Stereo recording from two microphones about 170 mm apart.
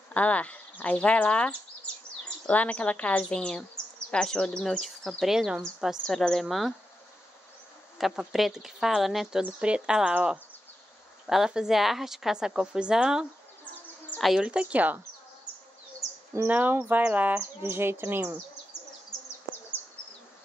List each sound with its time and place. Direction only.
0.1 s speech: 10° left (ahead or behind)
8.0 s speech: centre (ahead or behind)
16.3 s speech: 10° right (ahead or behind)
19.0 s insect: 15° left (ahead or behind)